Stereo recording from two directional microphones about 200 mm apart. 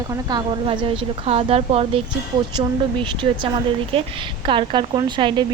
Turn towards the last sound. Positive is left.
turn(degrees=-25)  # may be behind; listen again after turning